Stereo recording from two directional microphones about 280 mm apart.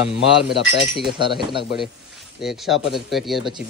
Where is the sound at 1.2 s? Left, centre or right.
Centre.